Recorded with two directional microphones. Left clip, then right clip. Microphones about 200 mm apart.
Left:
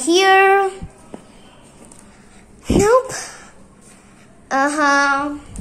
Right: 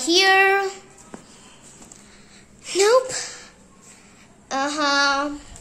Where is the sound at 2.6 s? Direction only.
5° right (ahead or behind).